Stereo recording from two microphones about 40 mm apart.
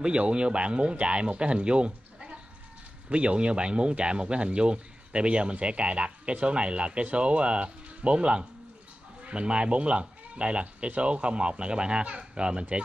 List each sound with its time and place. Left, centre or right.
0.0 s speech: right